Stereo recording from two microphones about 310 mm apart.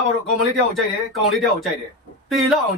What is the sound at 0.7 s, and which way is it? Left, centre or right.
Speech, centre.